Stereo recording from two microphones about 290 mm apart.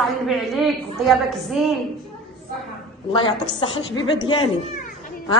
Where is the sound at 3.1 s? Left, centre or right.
Centre.